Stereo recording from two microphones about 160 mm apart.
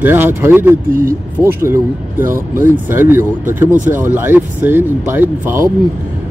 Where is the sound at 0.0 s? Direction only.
15° right (ahead or behind).